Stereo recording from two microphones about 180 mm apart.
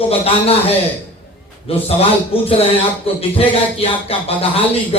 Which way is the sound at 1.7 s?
35° left (ahead or behind).